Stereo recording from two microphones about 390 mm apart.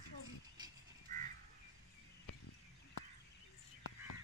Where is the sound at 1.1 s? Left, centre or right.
Centre.